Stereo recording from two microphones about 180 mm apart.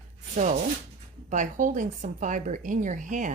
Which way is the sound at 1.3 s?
45° right (ahead or behind).